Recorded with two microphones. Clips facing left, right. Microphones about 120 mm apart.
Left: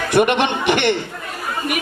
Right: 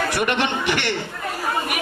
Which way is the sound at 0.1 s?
20° left (ahead or behind).